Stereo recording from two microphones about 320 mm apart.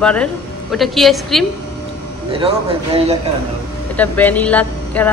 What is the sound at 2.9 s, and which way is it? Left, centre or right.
Speech, centre.